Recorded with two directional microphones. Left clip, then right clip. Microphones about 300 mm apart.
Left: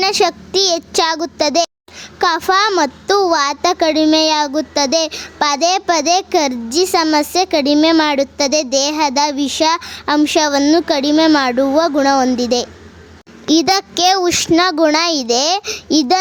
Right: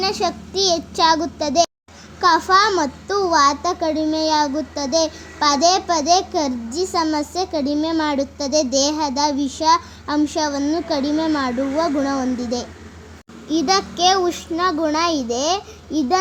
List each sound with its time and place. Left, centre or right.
0.0 s a child's voice: left